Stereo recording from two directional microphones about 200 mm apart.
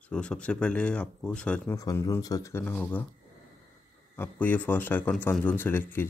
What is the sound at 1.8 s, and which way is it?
A man's voice, 15° left (ahead or behind).